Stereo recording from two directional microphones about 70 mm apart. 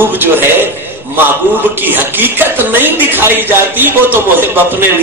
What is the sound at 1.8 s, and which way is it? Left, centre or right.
Speech, right.